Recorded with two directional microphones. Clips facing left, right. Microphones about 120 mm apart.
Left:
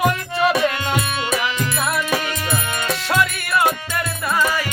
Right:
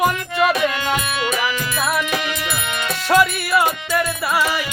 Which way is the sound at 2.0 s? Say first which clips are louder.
Even; 35° left (ahead or behind).